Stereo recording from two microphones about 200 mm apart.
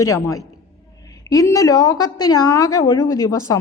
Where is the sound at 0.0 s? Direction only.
15° left (ahead or behind).